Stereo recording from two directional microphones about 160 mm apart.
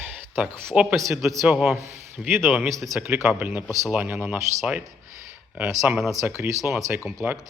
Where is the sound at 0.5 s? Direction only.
5° left (ahead or behind).